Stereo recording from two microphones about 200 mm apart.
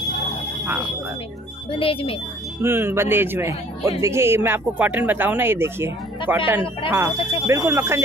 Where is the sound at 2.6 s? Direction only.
10° right (ahead or behind).